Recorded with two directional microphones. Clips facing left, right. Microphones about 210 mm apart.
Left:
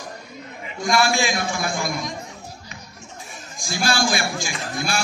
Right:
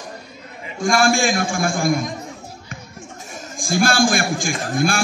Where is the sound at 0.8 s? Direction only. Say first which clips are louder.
Right 4 dB; 50° right (ahead or behind).